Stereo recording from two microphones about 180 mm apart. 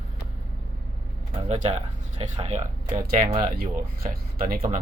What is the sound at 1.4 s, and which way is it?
Speech, 35° right (ahead or behind).